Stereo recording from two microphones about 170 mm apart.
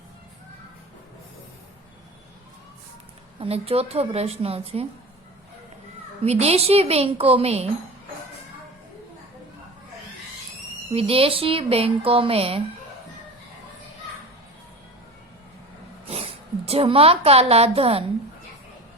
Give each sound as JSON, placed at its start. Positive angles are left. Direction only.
{"t": 3.4, "sound": "speech", "side_deg": -35}
{"t": 6.2, "sound": "speech", "side_deg": -40}
{"t": 10.9, "sound": "speech", "side_deg": -35}
{"t": 16.0, "sound": "a woman's voice", "side_deg": -35}